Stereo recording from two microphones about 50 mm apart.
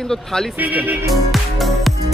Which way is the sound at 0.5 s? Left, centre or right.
Right.